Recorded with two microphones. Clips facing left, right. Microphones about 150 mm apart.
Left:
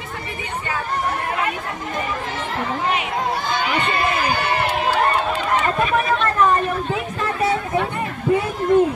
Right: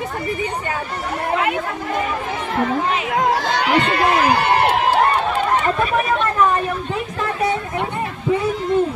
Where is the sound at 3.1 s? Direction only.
90° right; by 5.0 s 65° right (ahead or behind).